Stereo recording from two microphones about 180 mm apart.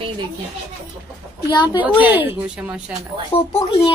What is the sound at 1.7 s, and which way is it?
Speech, 10° right (ahead or behind).